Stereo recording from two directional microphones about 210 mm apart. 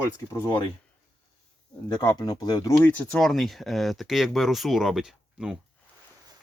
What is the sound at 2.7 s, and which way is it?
Speech, 5° left (ahead or behind).